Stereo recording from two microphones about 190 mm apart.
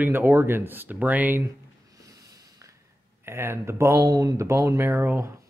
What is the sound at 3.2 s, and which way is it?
Speech, 15° right (ahead or behind).